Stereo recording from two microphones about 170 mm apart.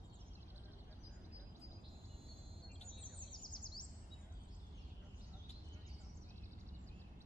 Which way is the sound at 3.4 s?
25° left (ahead or behind).